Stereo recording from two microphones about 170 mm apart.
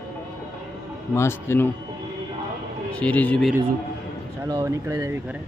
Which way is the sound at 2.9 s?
5° left (ahead or behind).